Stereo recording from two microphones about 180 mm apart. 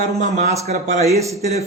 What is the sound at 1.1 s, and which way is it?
Speech, 15° right (ahead or behind).